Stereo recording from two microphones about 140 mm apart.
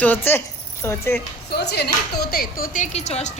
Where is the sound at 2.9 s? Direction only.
55° left (ahead or behind).